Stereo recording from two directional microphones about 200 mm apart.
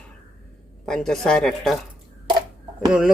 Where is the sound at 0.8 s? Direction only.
5° left (ahead or behind).